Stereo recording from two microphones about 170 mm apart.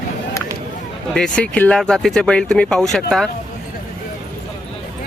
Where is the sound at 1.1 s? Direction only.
5° left (ahead or behind).